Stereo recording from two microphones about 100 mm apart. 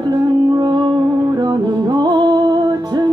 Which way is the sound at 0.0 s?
45° right (ahead or behind).